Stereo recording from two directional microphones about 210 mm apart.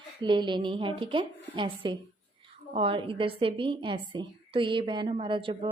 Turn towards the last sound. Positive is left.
turn(degrees=-25)  # may be behind; listen again after turning